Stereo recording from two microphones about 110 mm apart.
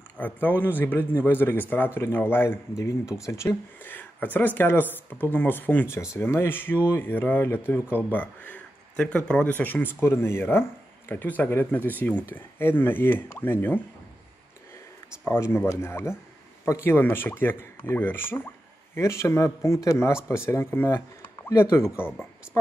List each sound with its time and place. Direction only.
0.2 s speech: 15° left (ahead or behind)
15.2 s speech: 20° left (ahead or behind)